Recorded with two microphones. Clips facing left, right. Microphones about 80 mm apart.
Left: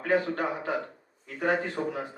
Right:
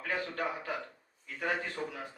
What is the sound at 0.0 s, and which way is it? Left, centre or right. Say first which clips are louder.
Speech: left 8 dB; left.